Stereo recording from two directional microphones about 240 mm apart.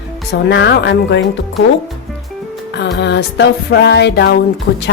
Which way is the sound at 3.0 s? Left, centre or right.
Left.